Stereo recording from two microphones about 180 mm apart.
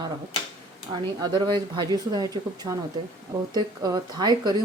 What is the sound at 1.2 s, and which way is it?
A woman's voice, 25° right (ahead or behind).